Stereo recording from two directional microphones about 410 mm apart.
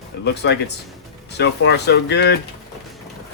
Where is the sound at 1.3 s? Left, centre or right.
Left.